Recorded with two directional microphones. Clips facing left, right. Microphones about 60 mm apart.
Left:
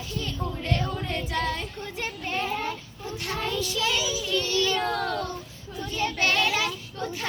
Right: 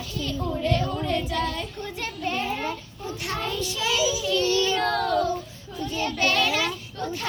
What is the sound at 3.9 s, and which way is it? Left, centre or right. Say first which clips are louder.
Child singing: right 4 dB; centre.